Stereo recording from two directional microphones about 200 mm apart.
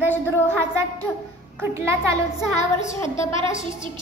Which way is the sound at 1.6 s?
15° right (ahead or behind).